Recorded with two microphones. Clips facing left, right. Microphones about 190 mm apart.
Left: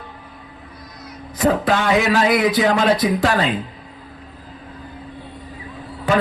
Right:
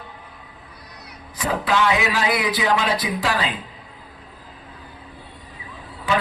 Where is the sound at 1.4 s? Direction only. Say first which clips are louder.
Left 4 dB; 45° left (ahead or behind).